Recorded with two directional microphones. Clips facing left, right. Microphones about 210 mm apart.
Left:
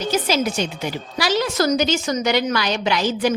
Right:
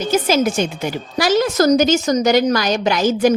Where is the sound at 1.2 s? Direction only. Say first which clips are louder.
Right 5 dB; 45° right (ahead or behind).